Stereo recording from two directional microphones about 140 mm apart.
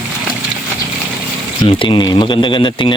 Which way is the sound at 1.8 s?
35° left (ahead or behind).